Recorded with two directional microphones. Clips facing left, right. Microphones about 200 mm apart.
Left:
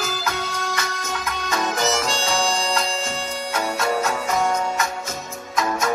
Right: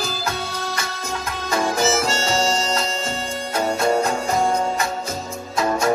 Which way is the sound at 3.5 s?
25° right (ahead or behind).